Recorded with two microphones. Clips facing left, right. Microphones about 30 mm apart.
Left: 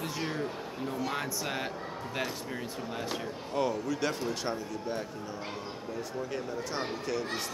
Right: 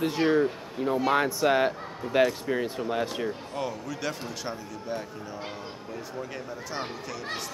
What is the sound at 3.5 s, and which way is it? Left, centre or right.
A man's voice, centre.